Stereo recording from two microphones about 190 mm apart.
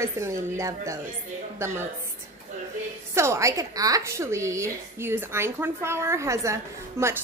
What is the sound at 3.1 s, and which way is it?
A woman's voice, 15° right (ahead or behind).